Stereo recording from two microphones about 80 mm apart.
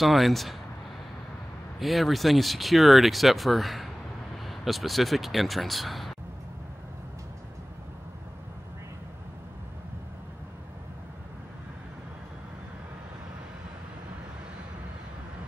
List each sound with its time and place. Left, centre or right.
0.0 s speech: centre
1.8 s speech: centre